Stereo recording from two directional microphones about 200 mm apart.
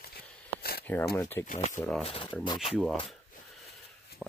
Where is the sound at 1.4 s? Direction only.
40° left (ahead or behind).